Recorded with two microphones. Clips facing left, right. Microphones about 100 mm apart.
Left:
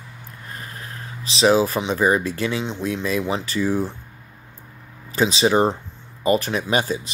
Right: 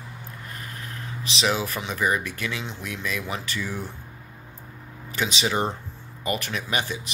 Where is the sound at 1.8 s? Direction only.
30° left (ahead or behind).